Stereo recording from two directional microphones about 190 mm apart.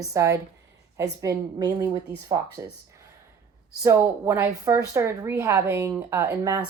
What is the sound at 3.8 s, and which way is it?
Speech, 10° right (ahead or behind).